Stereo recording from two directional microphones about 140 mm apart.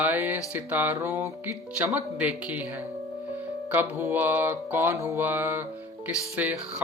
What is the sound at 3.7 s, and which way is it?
Music, 15° right (ahead or behind).